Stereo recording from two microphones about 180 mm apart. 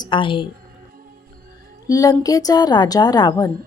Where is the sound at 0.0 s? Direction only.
25° left (ahead or behind).